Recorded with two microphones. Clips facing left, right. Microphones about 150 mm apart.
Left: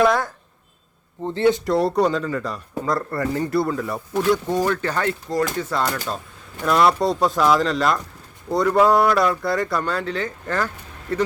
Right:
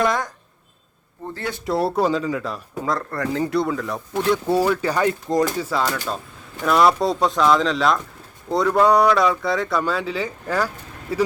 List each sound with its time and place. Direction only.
0.0 s speech: 5° left (ahead or behind)
1.2 s speech: 20° left (ahead or behind)
1.6 s speech: centre (ahead or behind)
4.4 s speech: 10° right (ahead or behind)
5.6 s speech: centre (ahead or behind)